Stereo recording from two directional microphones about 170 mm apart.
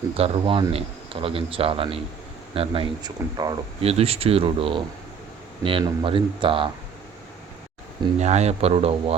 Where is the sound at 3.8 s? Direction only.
35° right (ahead or behind).